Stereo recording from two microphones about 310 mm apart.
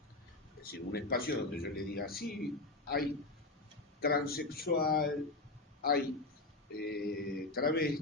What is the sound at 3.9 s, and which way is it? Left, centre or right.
A man's voice, left.